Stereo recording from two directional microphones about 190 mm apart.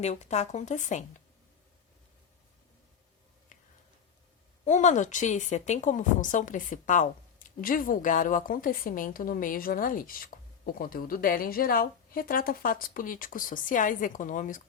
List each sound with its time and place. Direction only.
0.0 s speech: 35° left (ahead or behind)
4.6 s a woman's voice: 40° left (ahead or behind)